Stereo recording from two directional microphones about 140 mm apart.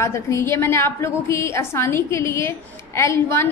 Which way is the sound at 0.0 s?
20° left (ahead or behind).